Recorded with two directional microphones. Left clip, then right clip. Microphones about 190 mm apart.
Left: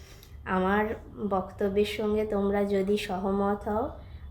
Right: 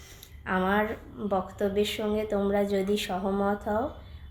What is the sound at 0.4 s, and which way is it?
A woman's voice, 10° right (ahead or behind).